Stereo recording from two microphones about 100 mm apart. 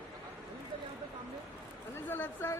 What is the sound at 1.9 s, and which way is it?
Speech, 25° left (ahead or behind).